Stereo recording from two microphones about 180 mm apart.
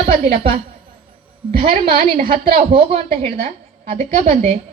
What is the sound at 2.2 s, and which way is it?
A woman's voice, 30° right (ahead or behind).